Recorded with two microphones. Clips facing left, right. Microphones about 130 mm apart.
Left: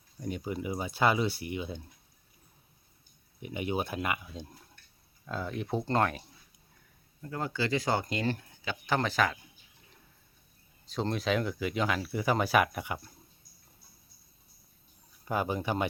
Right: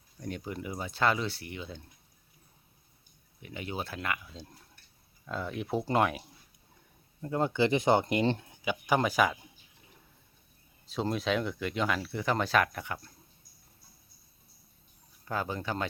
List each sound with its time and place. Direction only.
0.2 s speech: 5° left (ahead or behind)
3.4 s speech: 15° left (ahead or behind)
5.2 s speech: centre (ahead or behind)
7.2 s speech: 25° right (ahead or behind)
10.8 s speech: centre (ahead or behind)
15.2 s speech: 15° left (ahead or behind)